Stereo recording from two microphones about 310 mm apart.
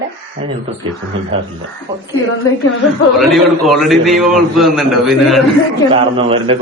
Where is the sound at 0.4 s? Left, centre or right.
Right.